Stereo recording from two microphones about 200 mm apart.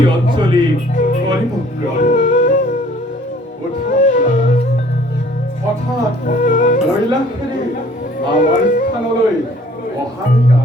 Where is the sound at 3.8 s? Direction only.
40° left (ahead or behind).